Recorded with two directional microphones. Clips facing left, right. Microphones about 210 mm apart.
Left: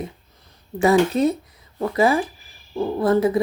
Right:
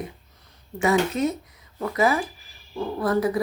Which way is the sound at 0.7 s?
35° left (ahead or behind).